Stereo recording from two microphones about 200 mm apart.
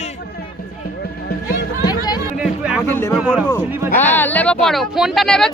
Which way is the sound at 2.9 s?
15° left (ahead or behind).